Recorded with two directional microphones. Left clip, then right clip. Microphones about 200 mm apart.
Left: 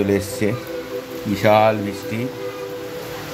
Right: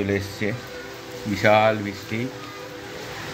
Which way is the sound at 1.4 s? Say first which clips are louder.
Left 3 dB; 15° left (ahead or behind).